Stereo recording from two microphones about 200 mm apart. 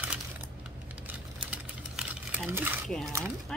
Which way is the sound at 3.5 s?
5° left (ahead or behind).